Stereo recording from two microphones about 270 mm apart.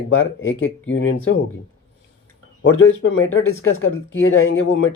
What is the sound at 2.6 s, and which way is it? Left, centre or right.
Speech, left.